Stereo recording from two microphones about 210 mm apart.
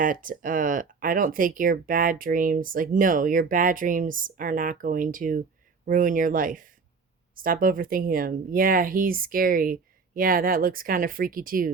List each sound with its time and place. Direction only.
0.0 s speech: 40° right (ahead or behind)